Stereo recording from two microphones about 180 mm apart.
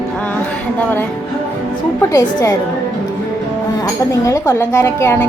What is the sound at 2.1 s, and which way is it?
Speech, 15° left (ahead or behind).